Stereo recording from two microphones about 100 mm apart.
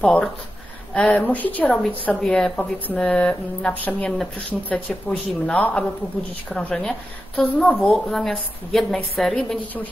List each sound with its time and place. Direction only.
0.0 s a woman's voice: 10° left (ahead or behind)